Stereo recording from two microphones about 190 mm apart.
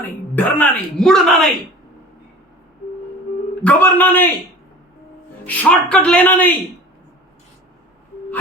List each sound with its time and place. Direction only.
0.3 s speech: 5° left (ahead or behind)
3.6 s speech: 10° left (ahead or behind)
5.5 s speech: 5° left (ahead or behind)